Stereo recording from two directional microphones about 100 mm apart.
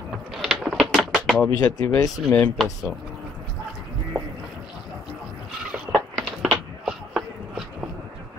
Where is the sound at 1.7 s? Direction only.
35° left (ahead or behind).